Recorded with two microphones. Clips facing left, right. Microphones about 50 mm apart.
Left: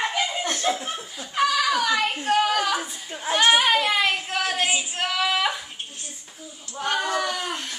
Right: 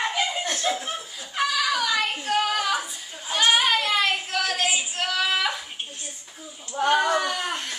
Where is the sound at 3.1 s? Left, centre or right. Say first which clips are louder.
Left 6 dB; left.